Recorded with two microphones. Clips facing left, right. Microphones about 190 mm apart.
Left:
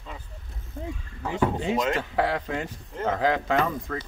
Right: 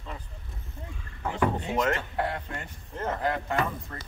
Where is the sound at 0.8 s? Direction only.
90° left.